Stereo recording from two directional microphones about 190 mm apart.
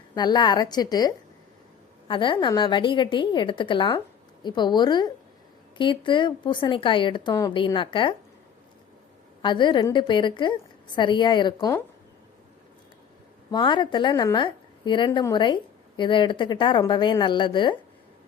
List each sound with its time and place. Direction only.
0.1 s speech: 20° left (ahead or behind)
9.4 s speech: 25° left (ahead or behind)
11.5 s speech: 15° left (ahead or behind)
13.5 s speech: 25° left (ahead or behind)